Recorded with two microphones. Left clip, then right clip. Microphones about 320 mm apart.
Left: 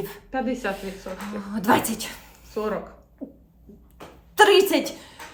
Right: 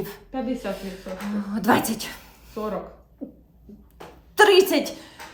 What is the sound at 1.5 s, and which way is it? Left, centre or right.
Speech, centre.